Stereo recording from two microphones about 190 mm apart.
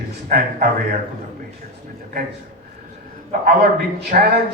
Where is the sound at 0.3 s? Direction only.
50° right (ahead or behind).